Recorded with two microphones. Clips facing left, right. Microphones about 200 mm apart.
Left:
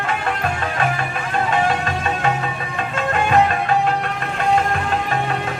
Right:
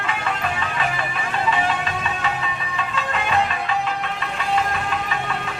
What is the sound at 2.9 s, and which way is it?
Music, 50° left (ahead or behind).